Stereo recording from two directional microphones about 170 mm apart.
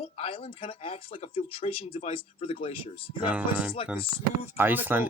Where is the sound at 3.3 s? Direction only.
5° right (ahead or behind).